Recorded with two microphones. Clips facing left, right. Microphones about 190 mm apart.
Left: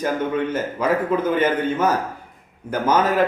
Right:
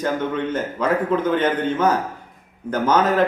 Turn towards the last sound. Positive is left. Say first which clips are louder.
# right 1 dB
turn(degrees=10)  # may be behind; listen again after turning